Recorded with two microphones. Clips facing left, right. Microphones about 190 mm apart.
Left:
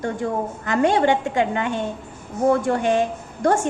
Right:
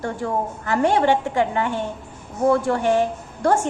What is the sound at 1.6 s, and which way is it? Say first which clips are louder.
A woman's voice: even; 15° left (ahead or behind).